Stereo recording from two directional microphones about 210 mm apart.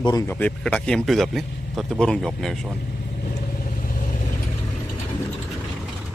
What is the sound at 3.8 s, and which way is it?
Vehicle, 40° left (ahead or behind).